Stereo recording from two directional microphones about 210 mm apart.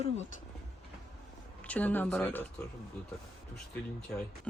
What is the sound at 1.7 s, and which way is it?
Speech, 5° left (ahead or behind).